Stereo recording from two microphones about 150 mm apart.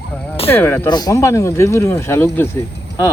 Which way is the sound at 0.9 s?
25° left (ahead or behind).